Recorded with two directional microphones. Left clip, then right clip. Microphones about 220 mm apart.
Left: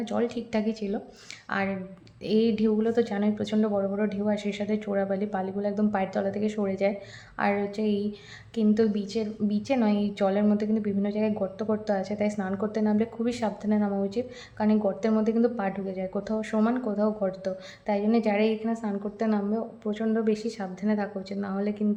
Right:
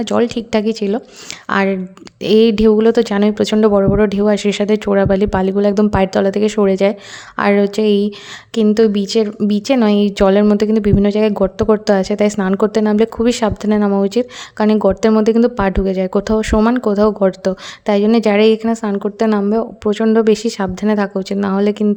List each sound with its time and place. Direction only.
0.0 s a woman's voice: 50° right (ahead or behind)